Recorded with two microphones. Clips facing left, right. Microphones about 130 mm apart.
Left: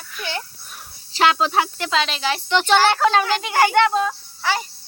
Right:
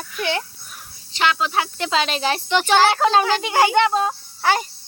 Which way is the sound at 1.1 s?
35° left (ahead or behind).